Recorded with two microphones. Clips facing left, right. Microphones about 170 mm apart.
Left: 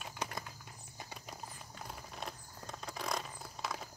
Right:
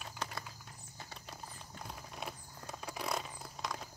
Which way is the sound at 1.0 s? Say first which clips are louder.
Left 2 dB; 15° left (ahead or behind).